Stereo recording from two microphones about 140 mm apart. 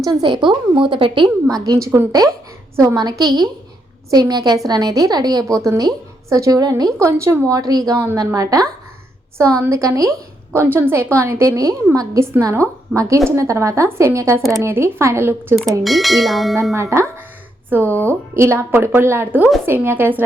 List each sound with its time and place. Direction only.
0.0 s a woman's voice: 30° right (ahead or behind)
7.9 s a woman's voice: 15° right (ahead or behind)
8.2 s a woman's voice: 25° right (ahead or behind)
15.8 s speech: centre (ahead or behind)
16.7 s a woman's voice: 20° right (ahead or behind)
17.9 s speech: 15° left (ahead or behind)
18.3 s a woman's voice: 20° right (ahead or behind)